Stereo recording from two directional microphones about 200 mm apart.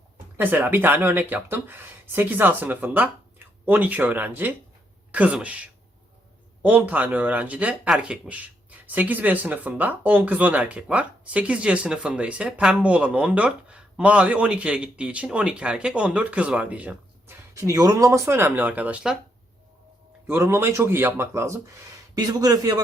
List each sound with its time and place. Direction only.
0.3 s speech: 10° right (ahead or behind)
20.2 s a man's voice: 10° right (ahead or behind)